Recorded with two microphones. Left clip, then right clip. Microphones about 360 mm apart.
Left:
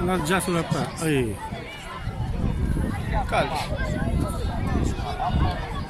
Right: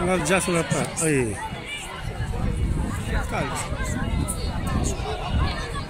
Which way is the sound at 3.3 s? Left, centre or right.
Left.